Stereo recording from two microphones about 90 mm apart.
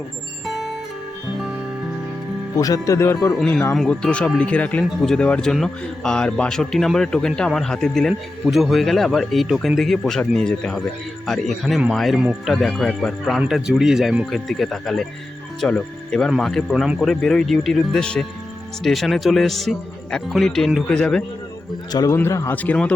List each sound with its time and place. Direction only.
0.4 s music: centre (ahead or behind)
2.6 s speech: 40° left (ahead or behind)
3.8 s speech: 10° left (ahead or behind)
22.1 s a man's voice: 30° left (ahead or behind)
22.5 s speech: 15° left (ahead or behind)